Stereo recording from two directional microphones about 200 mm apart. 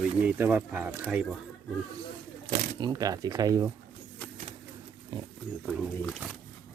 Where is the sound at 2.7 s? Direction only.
20° right (ahead or behind).